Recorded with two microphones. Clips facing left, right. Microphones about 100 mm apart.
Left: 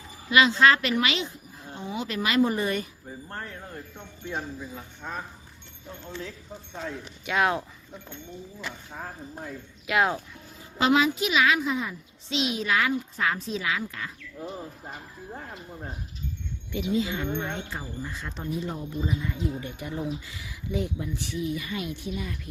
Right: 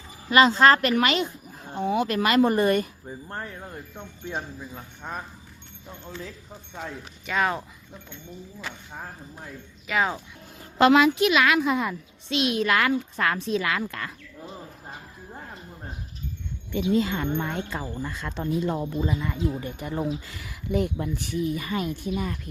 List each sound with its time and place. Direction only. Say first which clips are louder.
0.3 s speech: right 3 dB; 40° right (ahead or behind)
1.7 s a child's voice: right 8 dB; 60° right (ahead or behind)
5.0 s speech: right 1 dB; 15° right (ahead or behind)
6.8 s speech: left 2 dB; centre (ahead or behind)
9.8 s speech: left 1 dB; 5° left (ahead or behind)
10.8 s a child's voice: right 5 dB; 65° right (ahead or behind)
16.7 s speech: right 4 dB; 50° right (ahead or behind)
17.7 s speech: right 4 dB; 90° right
19.5 s speech: right 3 dB; 40° right (ahead or behind)
20.2 s speech: right 2 dB; 65° right (ahead or behind); by 22.4 s 45° right (ahead or behind)